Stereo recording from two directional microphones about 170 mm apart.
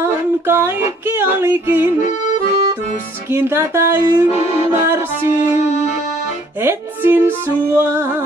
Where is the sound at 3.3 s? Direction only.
15° right (ahead or behind).